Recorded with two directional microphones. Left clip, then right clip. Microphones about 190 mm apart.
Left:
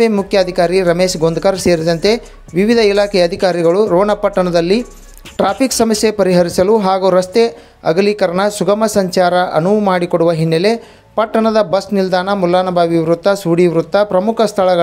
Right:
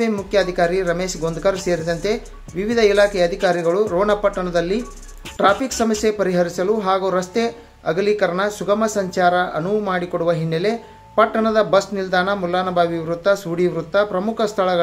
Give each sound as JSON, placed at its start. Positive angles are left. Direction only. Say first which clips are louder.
{"t": 0.0, "sound": "speech", "louder": "left 6 dB", "side_deg": 45}